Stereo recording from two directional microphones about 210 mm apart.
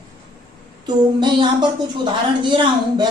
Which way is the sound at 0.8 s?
20° right (ahead or behind).